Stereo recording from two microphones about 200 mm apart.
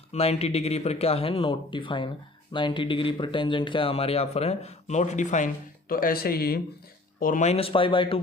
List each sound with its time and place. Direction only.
0.1 s speech: 30° left (ahead or behind)